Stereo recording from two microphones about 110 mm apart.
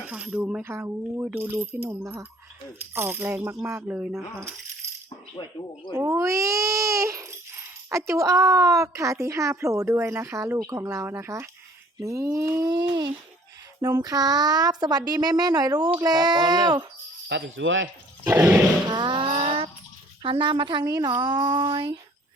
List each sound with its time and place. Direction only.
0.1 s speech: 10° right (ahead or behind)
0.6 s speech: 20° right (ahead or behind)
3.8 s speech: 15° right (ahead or behind)
4.1 s speech: 25° right (ahead or behind)
5.9 s speech: 30° right (ahead or behind)
10.6 s speech: 30° right (ahead or behind)
18.3 s speech: 25° right (ahead or behind)
18.9 s a sound: 45° right (ahead or behind)
20.2 s a woman's voice: 50° right (ahead or behind)